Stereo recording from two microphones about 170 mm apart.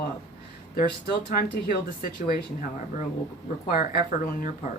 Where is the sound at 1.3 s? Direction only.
60° left (ahead or behind).